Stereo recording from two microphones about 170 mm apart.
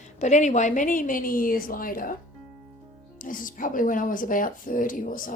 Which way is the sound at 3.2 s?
55° left (ahead or behind).